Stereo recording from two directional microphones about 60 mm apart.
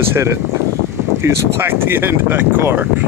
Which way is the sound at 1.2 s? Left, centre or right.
Right.